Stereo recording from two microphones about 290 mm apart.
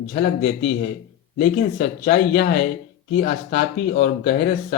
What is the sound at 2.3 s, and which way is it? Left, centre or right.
Speech, left.